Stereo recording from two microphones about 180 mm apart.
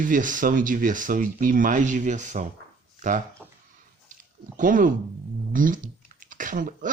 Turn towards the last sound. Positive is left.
turn(degrees=-45)  # may be behind; listen again after turning